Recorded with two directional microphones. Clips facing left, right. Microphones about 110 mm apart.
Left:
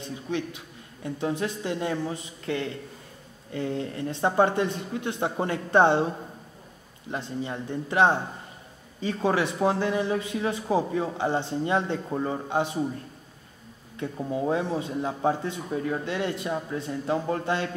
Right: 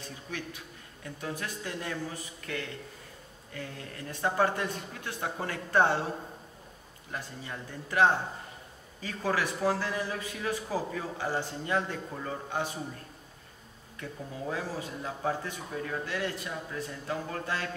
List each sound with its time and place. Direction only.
0.0 s a sound: 20° left (ahead or behind)
1.0 s a man's voice: 25° left (ahead or behind)
7.1 s a man's voice: 25° left (ahead or behind)
13.9 s a man's voice: 25° left (ahead or behind)